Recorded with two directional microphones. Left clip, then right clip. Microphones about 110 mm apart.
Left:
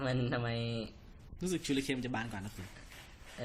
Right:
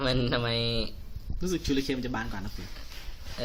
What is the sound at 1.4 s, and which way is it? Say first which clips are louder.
Speech: right 6 dB; 15° left (ahead or behind).